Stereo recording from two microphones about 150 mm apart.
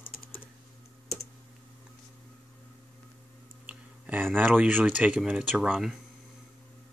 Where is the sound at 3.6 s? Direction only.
10° right (ahead or behind).